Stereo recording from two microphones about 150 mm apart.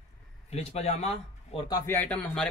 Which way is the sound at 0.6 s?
45° left (ahead or behind).